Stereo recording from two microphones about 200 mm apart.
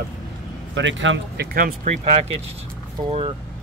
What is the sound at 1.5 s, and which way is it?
Speech, 40° right (ahead or behind).